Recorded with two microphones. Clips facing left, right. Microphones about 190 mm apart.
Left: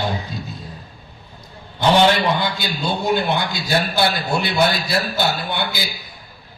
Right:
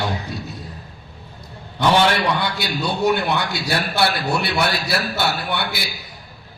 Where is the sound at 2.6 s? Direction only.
70° right (ahead or behind).